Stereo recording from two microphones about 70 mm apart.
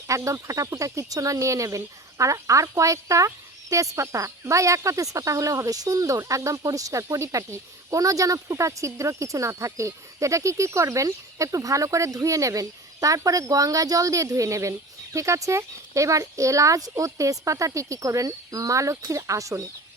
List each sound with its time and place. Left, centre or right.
0.1 s speech: right